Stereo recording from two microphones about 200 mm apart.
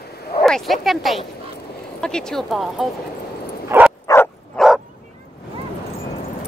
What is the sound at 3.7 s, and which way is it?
Bow-wow, 10° right (ahead or behind).